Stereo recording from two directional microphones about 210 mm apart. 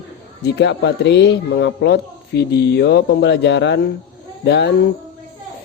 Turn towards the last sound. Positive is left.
turn(degrees=55)  # may be behind; listen again after turning